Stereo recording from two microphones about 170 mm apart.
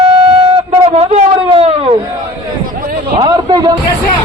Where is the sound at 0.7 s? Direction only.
35° right (ahead or behind).